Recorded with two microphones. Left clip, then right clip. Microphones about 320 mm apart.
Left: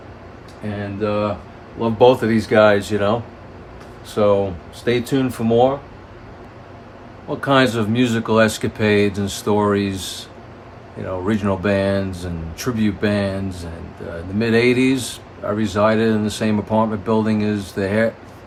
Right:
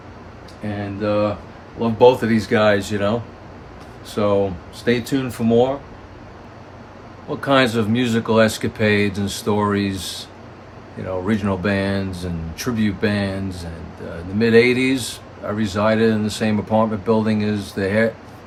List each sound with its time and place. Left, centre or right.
0.6 s speech: centre
7.3 s speech: centre
11.3 s speech: centre